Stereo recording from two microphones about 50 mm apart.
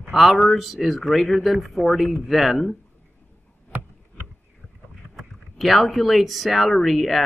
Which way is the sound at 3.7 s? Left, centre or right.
Right.